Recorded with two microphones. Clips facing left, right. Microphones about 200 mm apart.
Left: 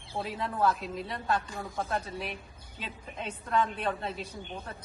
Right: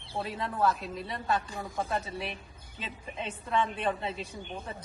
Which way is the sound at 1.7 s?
15° right (ahead or behind).